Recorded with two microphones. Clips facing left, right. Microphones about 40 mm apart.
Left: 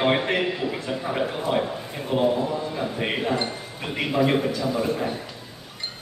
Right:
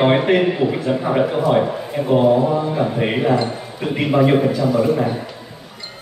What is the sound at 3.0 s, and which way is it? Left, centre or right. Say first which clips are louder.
A man's voice: right 6 dB; centre.